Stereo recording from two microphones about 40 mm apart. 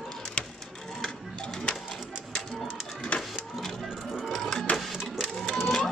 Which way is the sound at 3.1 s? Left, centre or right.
Left.